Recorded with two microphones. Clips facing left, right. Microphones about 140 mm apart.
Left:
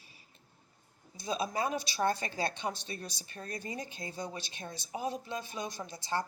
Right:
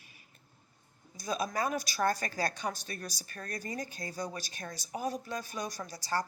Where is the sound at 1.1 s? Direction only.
30° left (ahead or behind).